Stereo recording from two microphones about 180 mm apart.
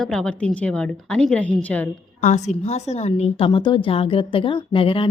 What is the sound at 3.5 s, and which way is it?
Speech, 25° left (ahead or behind).